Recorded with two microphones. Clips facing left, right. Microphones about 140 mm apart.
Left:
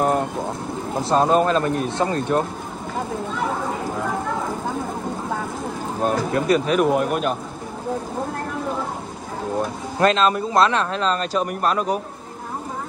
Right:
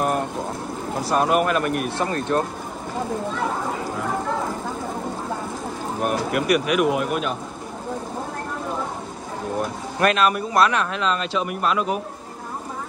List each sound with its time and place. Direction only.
0.0 s boat: 20° left (ahead or behind)
0.9 s speech: 25° left (ahead or behind)
5.9 s speech: 25° left (ahead or behind)
7.0 s speech: 40° left (ahead or behind)
9.6 s speech: 25° left (ahead or behind); by 12.0 s 40° left (ahead or behind)